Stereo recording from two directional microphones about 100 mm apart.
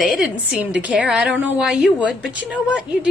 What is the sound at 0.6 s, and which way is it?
A woman's voice, 15° right (ahead or behind).